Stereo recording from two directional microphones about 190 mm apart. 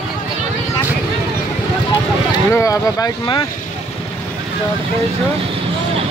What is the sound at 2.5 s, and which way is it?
Speech, 15° left (ahead or behind).